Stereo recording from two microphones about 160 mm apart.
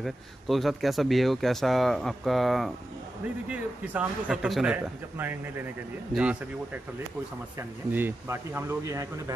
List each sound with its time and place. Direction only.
0.0 s speech: centre (ahead or behind); by 9.0 s 15° right (ahead or behind)